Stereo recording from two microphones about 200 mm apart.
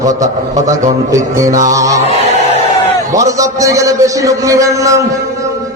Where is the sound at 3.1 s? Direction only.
15° right (ahead or behind).